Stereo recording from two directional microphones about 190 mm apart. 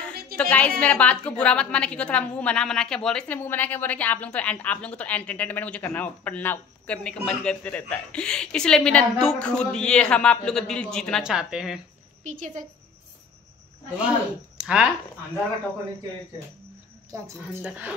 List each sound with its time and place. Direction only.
0.1 s a sound: 55° right (ahead or behind)
0.4 s a woman's voice: 5° left (ahead or behind)
12.2 s speech: 40° right (ahead or behind)
14.6 s speech: 5° right (ahead or behind)
17.1 s a woman's voice: 10° right (ahead or behind)